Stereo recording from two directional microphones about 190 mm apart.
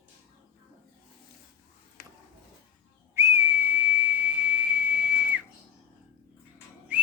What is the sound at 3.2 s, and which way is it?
Whistle, 15° right (ahead or behind).